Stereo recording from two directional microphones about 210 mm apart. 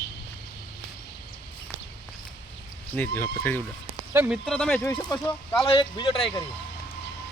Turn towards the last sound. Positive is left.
turn(degrees=25)  # may be behind; listen again after turning